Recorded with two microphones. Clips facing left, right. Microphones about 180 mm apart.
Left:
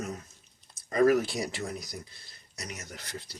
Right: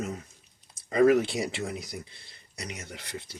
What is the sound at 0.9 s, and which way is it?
Speech, 25° right (ahead or behind).